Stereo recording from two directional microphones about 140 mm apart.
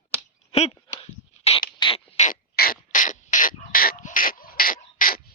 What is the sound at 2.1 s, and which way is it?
Beatboxing, 65° left (ahead or behind).